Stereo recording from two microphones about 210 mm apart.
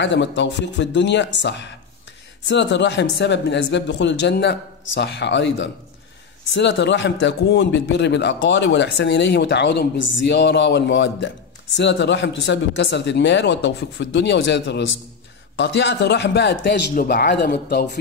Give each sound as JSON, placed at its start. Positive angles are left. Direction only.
{"t": 0.0, "sound": "a man's voice", "side_deg": 60}